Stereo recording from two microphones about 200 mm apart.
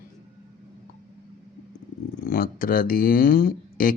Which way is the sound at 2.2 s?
45° left (ahead or behind).